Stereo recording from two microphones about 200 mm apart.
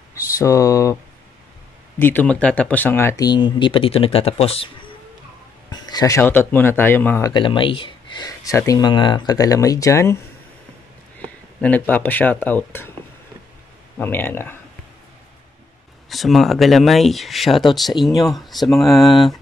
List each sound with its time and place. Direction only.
0.1 s speech: 15° left (ahead or behind)
2.0 s speech: 10° left (ahead or behind); by 4.6 s 30° left (ahead or behind)
5.7 s speech: 20° left (ahead or behind)
7.3 s speech: 25° left (ahead or behind)
11.1 s speech: 5° left (ahead or behind)
13.9 s speech: 10° left (ahead or behind)
16.1 s speech: centre (ahead or behind)